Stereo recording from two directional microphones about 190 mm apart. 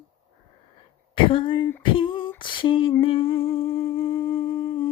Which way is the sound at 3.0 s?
30° left (ahead or behind).